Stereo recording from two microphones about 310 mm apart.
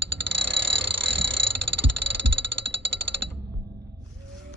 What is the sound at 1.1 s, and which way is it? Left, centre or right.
Heart sounds, right.